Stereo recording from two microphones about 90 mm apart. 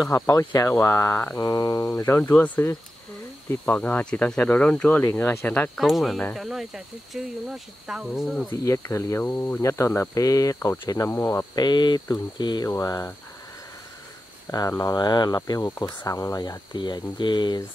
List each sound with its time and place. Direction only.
0.0 s speech: 35° left (ahead or behind)
2.4 s speech: 15° left (ahead or behind)
5.8 s speech: centre (ahead or behind)
8.6 s speech: 35° left (ahead or behind)
11.1 s speech: 25° left (ahead or behind)
11.5 s speech: 55° left (ahead or behind)
12.6 s speech: 40° left (ahead or behind)
14.9 s speech: 55° left (ahead or behind)